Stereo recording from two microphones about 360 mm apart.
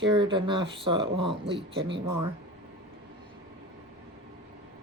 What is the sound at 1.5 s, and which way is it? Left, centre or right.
Speech, right.